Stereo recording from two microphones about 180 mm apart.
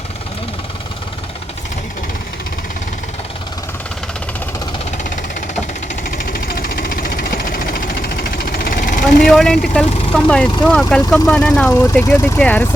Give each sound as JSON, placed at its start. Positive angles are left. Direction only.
{"t": 6.0, "sound": "vehicle", "side_deg": 50}
{"t": 9.2, "sound": "speech", "side_deg": 0}